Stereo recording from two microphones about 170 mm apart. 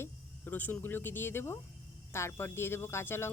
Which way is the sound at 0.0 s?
10° left (ahead or behind).